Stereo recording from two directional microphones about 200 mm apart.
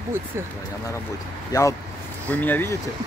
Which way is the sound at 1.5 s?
15° left (ahead or behind).